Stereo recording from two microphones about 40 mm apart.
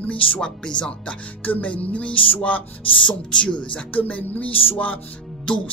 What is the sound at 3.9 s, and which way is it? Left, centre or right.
A man's voice, left.